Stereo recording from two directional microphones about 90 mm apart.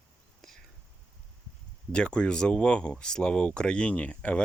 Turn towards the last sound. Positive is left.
turn(degrees=15)  # may be behind; listen again after turning